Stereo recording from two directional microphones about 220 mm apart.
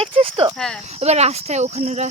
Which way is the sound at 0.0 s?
25° right (ahead or behind).